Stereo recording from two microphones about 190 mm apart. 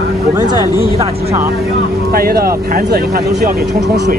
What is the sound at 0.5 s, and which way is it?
Speech, 20° left (ahead or behind).